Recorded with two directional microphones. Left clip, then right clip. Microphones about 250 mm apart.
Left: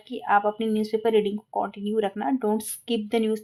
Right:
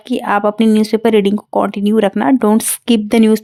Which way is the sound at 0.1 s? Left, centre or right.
Right.